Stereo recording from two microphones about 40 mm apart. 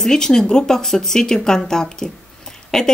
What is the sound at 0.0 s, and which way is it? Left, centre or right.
Speech, centre.